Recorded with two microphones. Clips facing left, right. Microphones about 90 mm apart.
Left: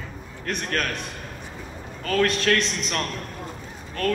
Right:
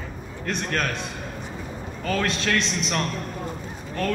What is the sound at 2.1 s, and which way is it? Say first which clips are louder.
Speech: left 4 dB; 15° right (ahead or behind).